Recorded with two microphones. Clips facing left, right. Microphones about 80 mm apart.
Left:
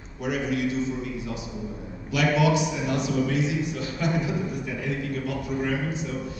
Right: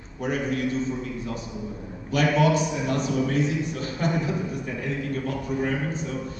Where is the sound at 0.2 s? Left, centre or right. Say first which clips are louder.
Even; right.